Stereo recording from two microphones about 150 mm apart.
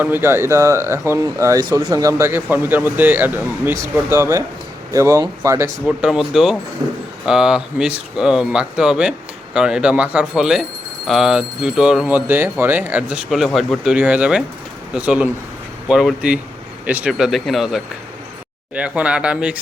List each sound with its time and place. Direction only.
0.0 s speech: 15° right (ahead or behind)
5.8 s speech: centre (ahead or behind)